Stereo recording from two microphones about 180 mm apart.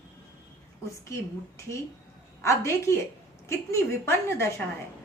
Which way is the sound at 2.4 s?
15° left (ahead or behind).